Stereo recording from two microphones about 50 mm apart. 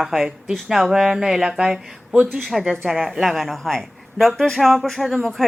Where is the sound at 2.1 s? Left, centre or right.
Right.